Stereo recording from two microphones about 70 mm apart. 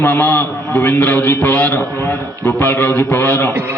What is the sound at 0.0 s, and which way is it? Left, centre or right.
A man's voice, left.